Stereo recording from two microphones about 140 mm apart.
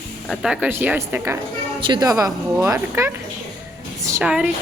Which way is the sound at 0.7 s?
15° right (ahead or behind).